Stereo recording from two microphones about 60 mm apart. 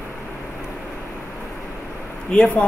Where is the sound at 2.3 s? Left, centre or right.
Centre.